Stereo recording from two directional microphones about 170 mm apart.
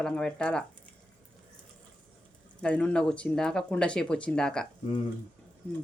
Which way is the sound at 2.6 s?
5° left (ahead or behind).